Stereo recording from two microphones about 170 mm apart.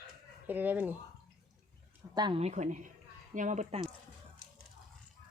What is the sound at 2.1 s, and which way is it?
Speech, 25° right (ahead or behind).